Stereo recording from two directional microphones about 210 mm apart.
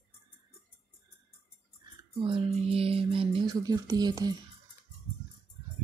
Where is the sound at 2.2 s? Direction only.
25° right (ahead or behind).